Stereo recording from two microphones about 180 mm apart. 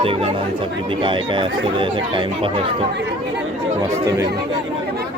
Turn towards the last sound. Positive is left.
turn(degrees=-20)  # may be behind; listen again after turning